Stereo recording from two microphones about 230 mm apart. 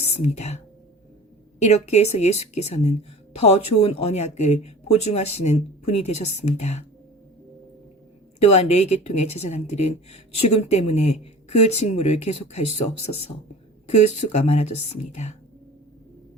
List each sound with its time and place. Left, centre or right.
0.1 s speech: left
8.4 s speech: left
13.8 s speech: left